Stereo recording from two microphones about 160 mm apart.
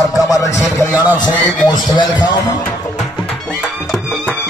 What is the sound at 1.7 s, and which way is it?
Speech, 25° left (ahead or behind).